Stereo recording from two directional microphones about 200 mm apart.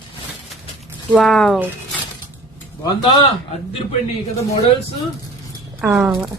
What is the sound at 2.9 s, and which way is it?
Speech, 25° left (ahead or behind).